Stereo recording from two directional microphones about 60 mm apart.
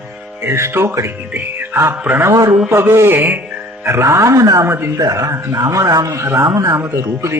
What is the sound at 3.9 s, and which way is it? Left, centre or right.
Speech, right.